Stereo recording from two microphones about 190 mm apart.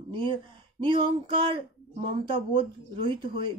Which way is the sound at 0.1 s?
25° right (ahead or behind).